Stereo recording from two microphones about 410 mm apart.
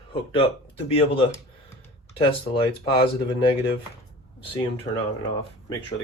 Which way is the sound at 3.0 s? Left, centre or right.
Centre.